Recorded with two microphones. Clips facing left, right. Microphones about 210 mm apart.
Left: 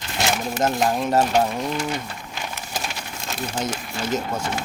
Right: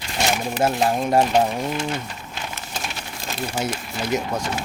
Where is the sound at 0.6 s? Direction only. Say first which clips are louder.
Right 1 dB; 10° right (ahead or behind).